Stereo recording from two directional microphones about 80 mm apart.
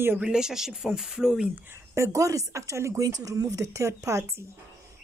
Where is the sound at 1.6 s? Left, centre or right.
Right.